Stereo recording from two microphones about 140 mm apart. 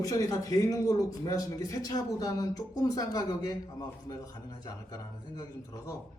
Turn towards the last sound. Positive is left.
turn(degrees=25)  # may be behind; listen again after turning